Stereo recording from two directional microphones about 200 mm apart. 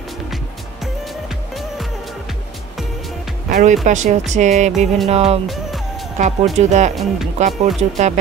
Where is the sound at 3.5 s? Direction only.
40° right (ahead or behind).